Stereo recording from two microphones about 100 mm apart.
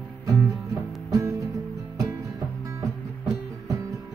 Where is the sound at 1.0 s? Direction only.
35° right (ahead or behind).